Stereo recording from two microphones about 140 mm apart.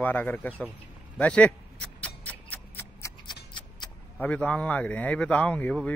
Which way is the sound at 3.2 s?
30° left (ahead or behind).